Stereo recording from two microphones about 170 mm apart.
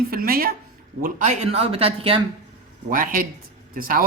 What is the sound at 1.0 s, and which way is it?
Speech, 45° right (ahead or behind).